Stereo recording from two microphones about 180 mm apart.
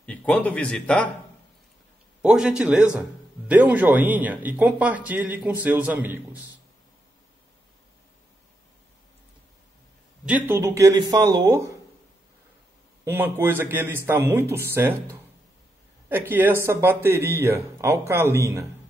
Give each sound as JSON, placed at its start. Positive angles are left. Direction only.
{"t": 0.0, "sound": "speech", "side_deg": 10}
{"t": 2.2, "sound": "speech", "side_deg": -5}
{"t": 10.2, "sound": "speech", "side_deg": -10}
{"t": 13.0, "sound": "speech", "side_deg": -10}